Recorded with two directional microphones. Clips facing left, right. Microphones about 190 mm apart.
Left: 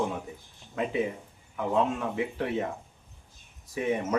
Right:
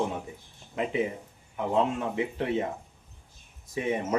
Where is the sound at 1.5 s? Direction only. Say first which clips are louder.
Even; 20° right (ahead or behind).